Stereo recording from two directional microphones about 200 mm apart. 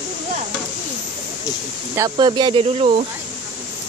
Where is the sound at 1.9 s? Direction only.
20° right (ahead or behind).